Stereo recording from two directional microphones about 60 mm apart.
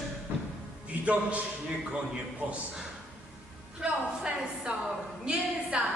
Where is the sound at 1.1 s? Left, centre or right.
Centre.